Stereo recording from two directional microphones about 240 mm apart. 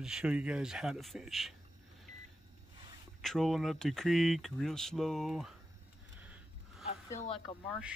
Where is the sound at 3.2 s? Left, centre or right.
Centre.